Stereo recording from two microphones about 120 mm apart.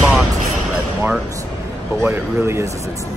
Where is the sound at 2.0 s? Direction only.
15° right (ahead or behind).